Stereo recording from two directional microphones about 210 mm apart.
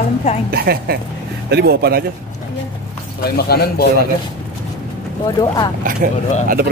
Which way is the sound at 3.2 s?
50° left (ahead or behind).